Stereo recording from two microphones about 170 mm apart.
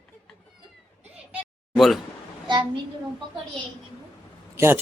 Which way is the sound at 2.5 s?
30° right (ahead or behind).